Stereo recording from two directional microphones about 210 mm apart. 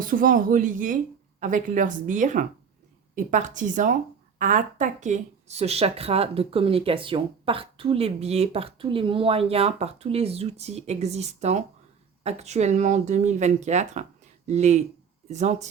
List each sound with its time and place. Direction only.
0.0 s speech: 40° right (ahead or behind)